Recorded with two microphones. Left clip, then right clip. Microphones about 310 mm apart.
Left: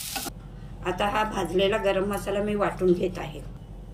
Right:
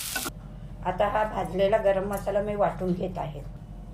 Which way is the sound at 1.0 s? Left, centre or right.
Right.